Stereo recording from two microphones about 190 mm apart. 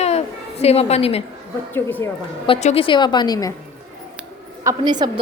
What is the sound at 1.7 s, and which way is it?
Speech, 10° left (ahead or behind).